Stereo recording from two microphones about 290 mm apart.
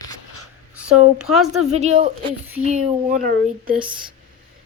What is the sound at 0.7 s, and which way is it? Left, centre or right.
Speech, centre.